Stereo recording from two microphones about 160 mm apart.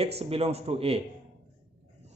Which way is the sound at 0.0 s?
40° right (ahead or behind).